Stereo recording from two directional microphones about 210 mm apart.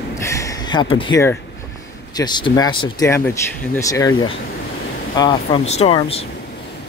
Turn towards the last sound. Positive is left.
turn(degrees=30)  # may be behind; listen again after turning